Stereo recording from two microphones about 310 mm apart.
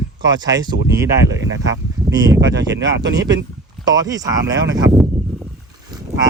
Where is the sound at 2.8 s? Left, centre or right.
Right.